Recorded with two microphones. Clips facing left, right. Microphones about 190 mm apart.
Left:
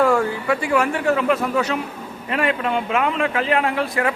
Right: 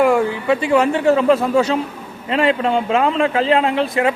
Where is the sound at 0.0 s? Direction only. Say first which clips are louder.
Right 3 dB; 15° right (ahead or behind).